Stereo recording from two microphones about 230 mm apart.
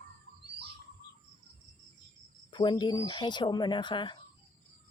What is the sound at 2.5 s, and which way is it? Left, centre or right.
Speech, centre.